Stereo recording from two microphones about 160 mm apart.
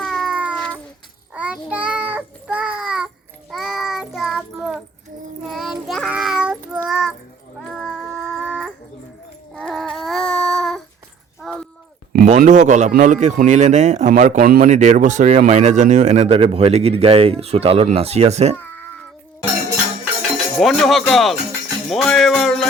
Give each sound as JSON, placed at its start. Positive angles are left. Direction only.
{"t": 0.0, "sound": "cat", "side_deg": 0}
{"t": 1.3, "sound": "child singing", "side_deg": -10}
{"t": 7.7, "sound": "a sound", "side_deg": 0}
{"t": 12.2, "sound": "a man's voice", "side_deg": -50}
{"t": 18.5, "sound": "cat", "side_deg": 10}
{"t": 20.3, "sound": "speech", "side_deg": 0}
{"t": 21.8, "sound": "music", "side_deg": 0}